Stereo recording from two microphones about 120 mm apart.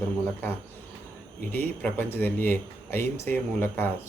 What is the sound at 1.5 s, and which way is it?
Speech, 15° left (ahead or behind).